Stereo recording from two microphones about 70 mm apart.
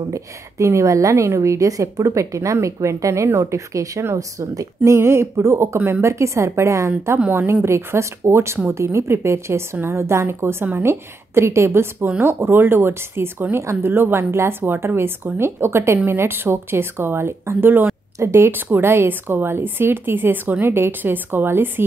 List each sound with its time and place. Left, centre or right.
0.1 s a woman's voice: right
7.2 s speech: right
14.6 s speech: right